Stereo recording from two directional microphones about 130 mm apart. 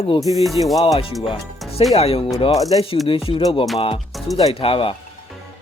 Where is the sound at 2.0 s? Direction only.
45° left (ahead or behind).